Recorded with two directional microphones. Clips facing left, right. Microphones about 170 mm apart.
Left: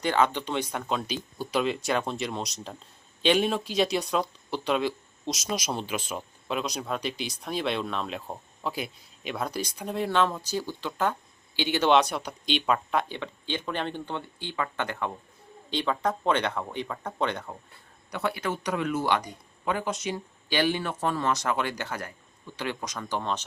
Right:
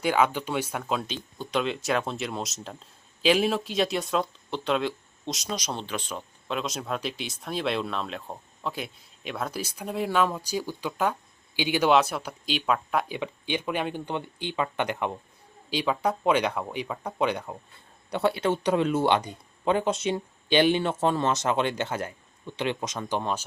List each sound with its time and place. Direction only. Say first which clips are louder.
0.0 s speech: right 1 dB; 10° right (ahead or behind)
18.1 s speech: right 5 dB; 30° right (ahead or behind)